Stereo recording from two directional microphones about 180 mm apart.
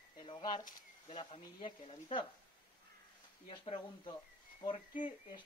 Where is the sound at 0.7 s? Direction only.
45° left (ahead or behind).